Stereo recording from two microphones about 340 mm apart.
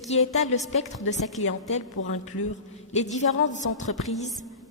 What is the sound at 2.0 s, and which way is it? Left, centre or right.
Speech, left.